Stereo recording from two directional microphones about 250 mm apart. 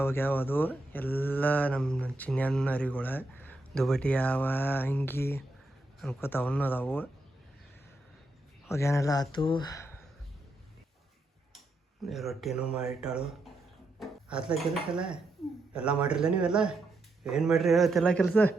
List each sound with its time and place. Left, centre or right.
0.0 s speech: centre
8.6 s speech: centre
12.0 s speech: centre